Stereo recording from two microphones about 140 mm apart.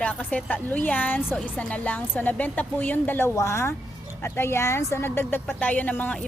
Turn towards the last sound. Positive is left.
turn(degrees=10)  # may be behind; listen again after turning